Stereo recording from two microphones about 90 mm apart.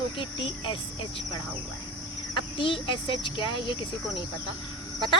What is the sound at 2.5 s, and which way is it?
Speech, 70° left (ahead or behind).